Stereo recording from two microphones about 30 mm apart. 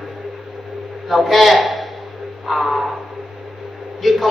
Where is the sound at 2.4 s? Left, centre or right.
Centre.